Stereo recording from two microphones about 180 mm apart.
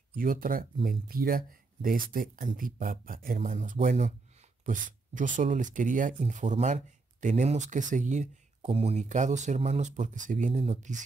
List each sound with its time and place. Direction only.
0.1 s speech: 50° right (ahead or behind)